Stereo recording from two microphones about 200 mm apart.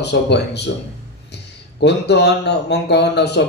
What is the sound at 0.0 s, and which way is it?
Speech, 60° left (ahead or behind).